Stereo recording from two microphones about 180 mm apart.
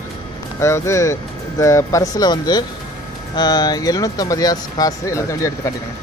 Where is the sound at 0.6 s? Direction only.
15° left (ahead or behind).